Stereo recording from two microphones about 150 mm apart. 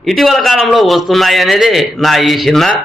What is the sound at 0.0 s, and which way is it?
A man's voice, centre (ahead or behind).